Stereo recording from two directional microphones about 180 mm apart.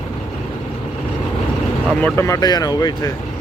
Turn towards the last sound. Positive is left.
turn(degrees=20)  # may be behind; listen again after turning